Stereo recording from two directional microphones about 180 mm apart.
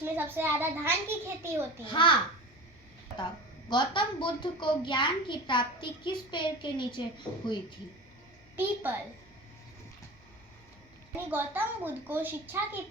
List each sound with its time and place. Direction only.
0.0 s a child's voice: 10° right (ahead or behind)
1.9 s a woman's voice: 25° left (ahead or behind)
3.7 s a woman's voice: 25° left (ahead or behind)
8.5 s a child's voice: 10° right (ahead or behind)
11.3 s a child's voice: 10° right (ahead or behind)